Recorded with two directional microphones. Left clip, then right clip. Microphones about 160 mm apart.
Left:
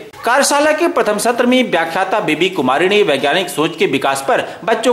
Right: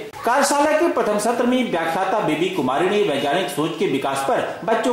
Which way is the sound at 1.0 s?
20° left (ahead or behind).